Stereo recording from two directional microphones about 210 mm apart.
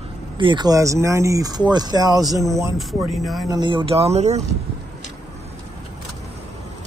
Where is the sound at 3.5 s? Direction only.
20° right (ahead or behind).